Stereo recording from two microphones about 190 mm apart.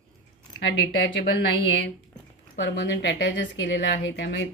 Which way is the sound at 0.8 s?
75° left (ahead or behind).